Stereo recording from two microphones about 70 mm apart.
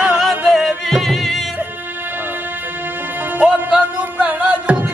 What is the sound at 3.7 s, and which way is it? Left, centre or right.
Music, centre.